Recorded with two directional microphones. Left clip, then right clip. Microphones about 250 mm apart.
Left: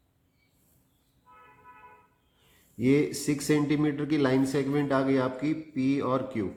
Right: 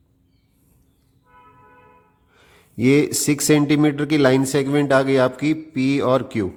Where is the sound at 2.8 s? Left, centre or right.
Right.